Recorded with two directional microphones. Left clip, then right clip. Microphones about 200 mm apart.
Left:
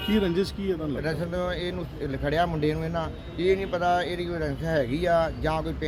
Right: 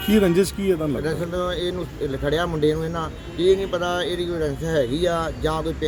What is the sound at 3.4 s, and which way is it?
Speech, centre (ahead or behind).